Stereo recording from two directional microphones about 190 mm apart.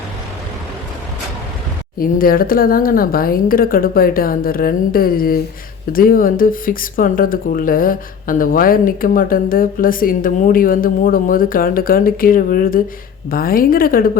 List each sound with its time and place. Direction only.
2.0 s speech: 50° left (ahead or behind)